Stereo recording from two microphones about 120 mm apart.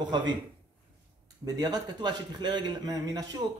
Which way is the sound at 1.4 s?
35° right (ahead or behind).